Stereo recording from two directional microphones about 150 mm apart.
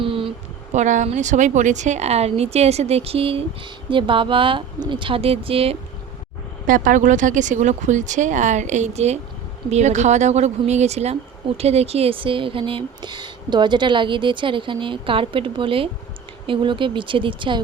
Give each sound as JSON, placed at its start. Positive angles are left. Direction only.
{"t": 0.0, "sound": "a sound", "side_deg": -35}
{"t": 0.7, "sound": "speech", "side_deg": -55}
{"t": 6.7, "sound": "speech", "side_deg": -65}